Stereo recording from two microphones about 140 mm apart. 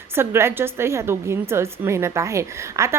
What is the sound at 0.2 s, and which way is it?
A woman's voice, 15° right (ahead or behind).